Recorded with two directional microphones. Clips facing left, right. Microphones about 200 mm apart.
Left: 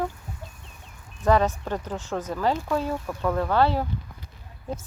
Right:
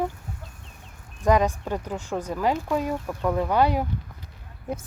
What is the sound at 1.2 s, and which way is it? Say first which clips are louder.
Speech: even; 15° right (ahead or behind).